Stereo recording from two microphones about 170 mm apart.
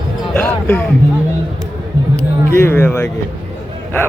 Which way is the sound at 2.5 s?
15° left (ahead or behind).